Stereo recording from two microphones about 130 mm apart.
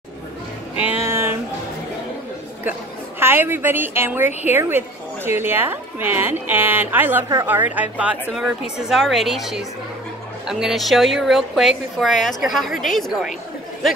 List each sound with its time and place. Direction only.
1.0 s music: 20° right (ahead or behind)
3.2 s a woman's voice: 15° right (ahead or behind); by 13.3 s centre (ahead or behind)